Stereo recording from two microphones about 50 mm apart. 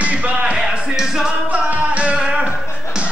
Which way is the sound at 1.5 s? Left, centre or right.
Right.